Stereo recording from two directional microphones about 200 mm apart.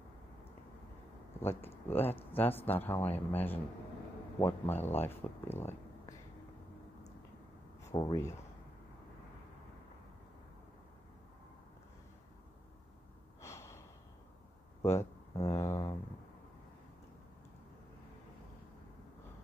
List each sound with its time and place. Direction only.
1.9 s speech: 10° left (ahead or behind)
7.9 s speech: 20° left (ahead or behind)
13.4 s gasp: 15° left (ahead or behind)
14.8 s speech: 15° left (ahead or behind)